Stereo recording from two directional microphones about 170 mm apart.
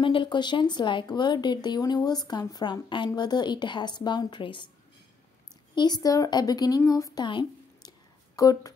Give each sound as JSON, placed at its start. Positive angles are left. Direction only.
{"t": 0.0, "sound": "speech", "side_deg": 30}
{"t": 5.8, "sound": "speech", "side_deg": 25}